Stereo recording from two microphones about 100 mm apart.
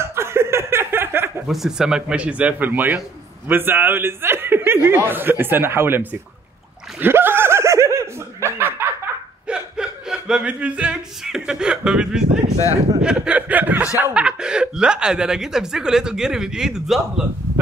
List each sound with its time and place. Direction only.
0.0 s chuckle: 25° right (ahead or behind)
1.5 s a man's voice: 5° right (ahead or behind); by 6.0 s 25° right (ahead or behind)
7.0 s snicker: 20° right (ahead or behind)
9.5 s speech: 5° right (ahead or behind)